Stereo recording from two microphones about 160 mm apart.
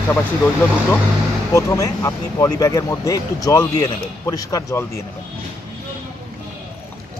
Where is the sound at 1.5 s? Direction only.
20° left (ahead or behind).